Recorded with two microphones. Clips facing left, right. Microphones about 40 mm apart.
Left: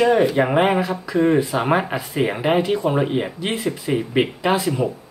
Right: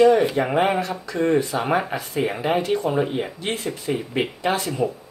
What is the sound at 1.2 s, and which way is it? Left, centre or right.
Speech, left.